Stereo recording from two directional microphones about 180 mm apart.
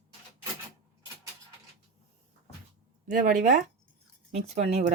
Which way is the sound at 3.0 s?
45° right (ahead or behind).